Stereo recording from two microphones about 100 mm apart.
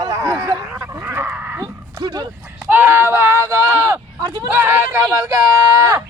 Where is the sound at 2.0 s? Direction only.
50° right (ahead or behind).